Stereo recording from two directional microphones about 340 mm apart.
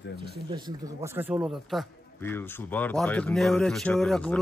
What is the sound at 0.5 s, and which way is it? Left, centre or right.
A man's voice, centre.